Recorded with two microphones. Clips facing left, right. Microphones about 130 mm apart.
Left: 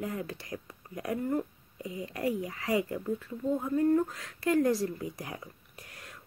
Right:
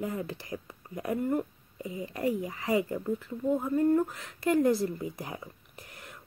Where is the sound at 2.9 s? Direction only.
10° right (ahead or behind).